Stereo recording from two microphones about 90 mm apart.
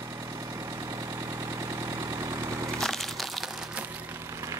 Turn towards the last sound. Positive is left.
turn(degrees=0)  # may be behind; listen again after turning